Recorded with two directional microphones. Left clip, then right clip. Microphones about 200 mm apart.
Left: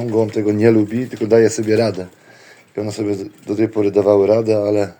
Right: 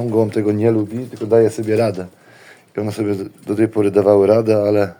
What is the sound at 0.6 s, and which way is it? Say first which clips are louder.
Speech: left 3 dB; 15° left (ahead or behind).